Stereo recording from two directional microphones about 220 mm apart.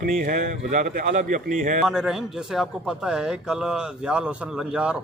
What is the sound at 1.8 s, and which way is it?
A man's voice, centre (ahead or behind).